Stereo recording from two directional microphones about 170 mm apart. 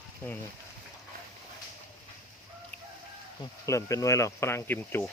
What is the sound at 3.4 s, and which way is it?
Speech, 20° left (ahead or behind).